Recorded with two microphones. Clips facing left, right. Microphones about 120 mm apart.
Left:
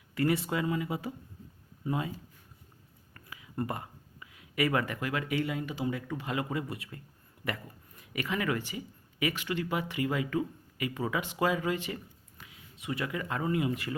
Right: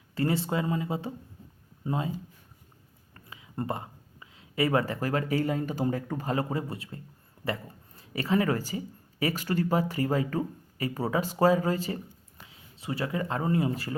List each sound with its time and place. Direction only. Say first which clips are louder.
0.1 s speech: right 1 dB; 30° right (ahead or behind)
3.2 s speech: even; 25° right (ahead or behind)